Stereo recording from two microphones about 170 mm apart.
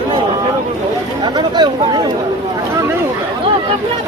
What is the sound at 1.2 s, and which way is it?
Speech, 25° right (ahead or behind).